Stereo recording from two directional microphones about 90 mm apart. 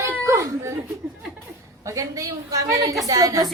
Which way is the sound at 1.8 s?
35° right (ahead or behind).